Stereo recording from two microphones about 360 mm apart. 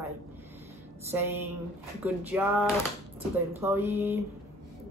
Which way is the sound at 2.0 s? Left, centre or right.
Centre.